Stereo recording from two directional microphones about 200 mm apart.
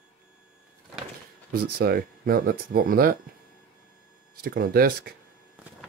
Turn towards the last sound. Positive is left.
turn(degrees=-50)  # may be behind; listen again after turning